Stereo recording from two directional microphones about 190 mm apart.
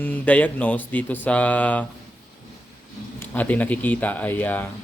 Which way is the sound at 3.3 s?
10° left (ahead or behind).